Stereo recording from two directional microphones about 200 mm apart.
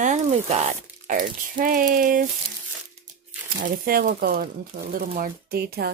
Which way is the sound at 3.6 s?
45° right (ahead or behind).